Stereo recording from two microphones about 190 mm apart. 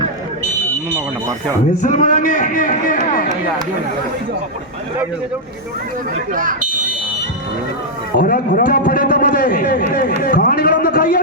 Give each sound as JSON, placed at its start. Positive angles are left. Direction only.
{"t": 1.8, "sound": "a man's voice", "side_deg": 40}
{"t": 6.3, "sound": "speech", "side_deg": -45}
{"t": 8.1, "sound": "a man's voice", "side_deg": 45}